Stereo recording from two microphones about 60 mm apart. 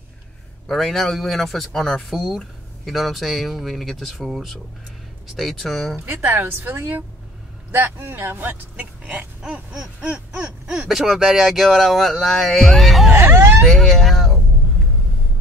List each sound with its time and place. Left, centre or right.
0.7 s speech: centre
6.0 s speech: right
8.7 s speech: right
9.4 s a sound: centre
9.9 s a sound: centre
10.9 s speech: centre
13.1 s speech: right
13.7 s speech: centre